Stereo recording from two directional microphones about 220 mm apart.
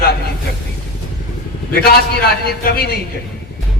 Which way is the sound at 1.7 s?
45° left (ahead or behind).